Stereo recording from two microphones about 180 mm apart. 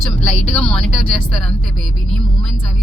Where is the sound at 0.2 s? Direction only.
5° left (ahead or behind).